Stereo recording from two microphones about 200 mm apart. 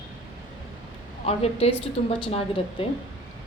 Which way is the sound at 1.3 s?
30° left (ahead or behind).